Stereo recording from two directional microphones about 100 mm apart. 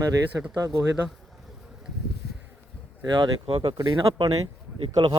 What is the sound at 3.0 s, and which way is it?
Speech, 50° right (ahead or behind).